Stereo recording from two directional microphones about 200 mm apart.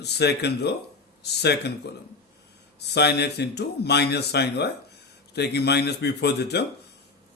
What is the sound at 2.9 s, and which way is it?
Speech, 55° left (ahead or behind).